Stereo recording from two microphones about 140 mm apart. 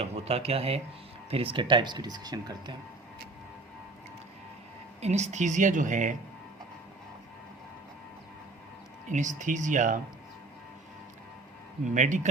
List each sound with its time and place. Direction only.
0.0 s speech: 45° right (ahead or behind); by 2.7 s 30° right (ahead or behind)
4.9 s a woman's voice: 55° right (ahead or behind)
9.0 s a woman's voice: 60° right (ahead or behind)
11.9 s a woman's voice: 60° right (ahead or behind)